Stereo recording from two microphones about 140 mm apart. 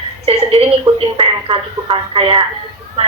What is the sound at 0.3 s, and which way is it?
A woman's voice, 45° right (ahead or behind).